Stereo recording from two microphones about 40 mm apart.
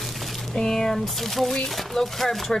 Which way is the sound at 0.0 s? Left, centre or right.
Centre.